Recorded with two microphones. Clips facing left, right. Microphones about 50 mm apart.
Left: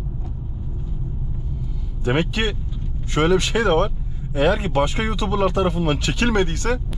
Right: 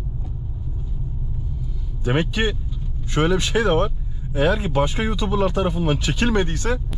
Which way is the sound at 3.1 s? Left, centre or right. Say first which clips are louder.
Left 1 dB; left.